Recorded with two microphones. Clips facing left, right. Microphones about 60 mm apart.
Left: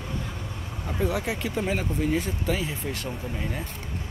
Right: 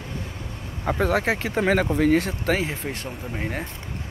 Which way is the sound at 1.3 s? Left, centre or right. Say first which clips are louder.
Right 5 dB; right.